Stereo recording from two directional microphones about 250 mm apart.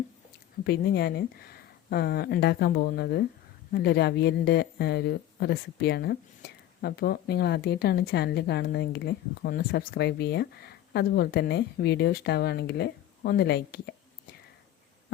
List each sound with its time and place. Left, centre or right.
0.6 s speech: left